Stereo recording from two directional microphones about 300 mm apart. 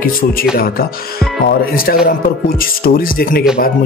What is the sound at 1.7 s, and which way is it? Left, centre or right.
A man's voice, left.